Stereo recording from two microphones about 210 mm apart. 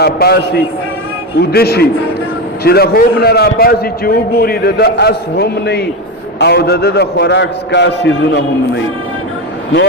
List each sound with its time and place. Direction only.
0.0 s a man's voice: 50° left (ahead or behind)